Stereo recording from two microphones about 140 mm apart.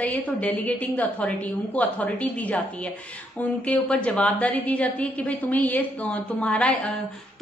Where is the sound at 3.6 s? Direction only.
10° left (ahead or behind).